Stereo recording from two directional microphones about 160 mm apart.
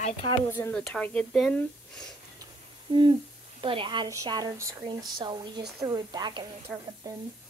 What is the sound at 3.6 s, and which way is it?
Speech, 30° right (ahead or behind).